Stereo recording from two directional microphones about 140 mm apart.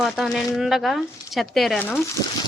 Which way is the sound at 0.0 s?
Centre (ahead or behind).